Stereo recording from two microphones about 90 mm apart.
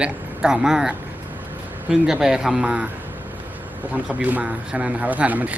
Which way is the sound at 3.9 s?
15° right (ahead or behind).